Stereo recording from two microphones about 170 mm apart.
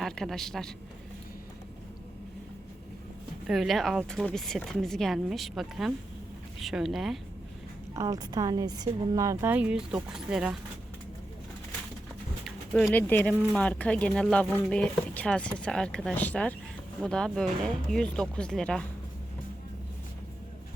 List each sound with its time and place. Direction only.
0.0 s a man's voice: centre (ahead or behind)
3.4 s speech: centre (ahead or behind)
7.9 s a woman's voice: 20° right (ahead or behind); by 10.6 s 5° right (ahead or behind)
12.8 s speech: 10° left (ahead or behind)